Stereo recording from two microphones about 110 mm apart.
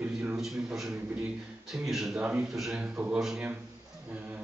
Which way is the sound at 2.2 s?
15° right (ahead or behind).